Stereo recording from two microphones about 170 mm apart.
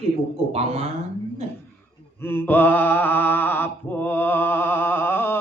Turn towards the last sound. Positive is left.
turn(degrees=10)  # may be behind; listen again after turning